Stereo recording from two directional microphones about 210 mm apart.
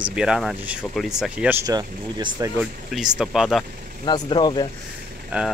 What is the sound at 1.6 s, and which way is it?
Speech, 20° right (ahead or behind).